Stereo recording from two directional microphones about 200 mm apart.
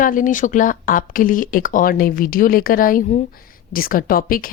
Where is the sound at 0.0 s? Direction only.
40° left (ahead or behind).